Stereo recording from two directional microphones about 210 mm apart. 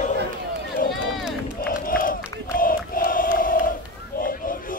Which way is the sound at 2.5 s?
40° left (ahead or behind).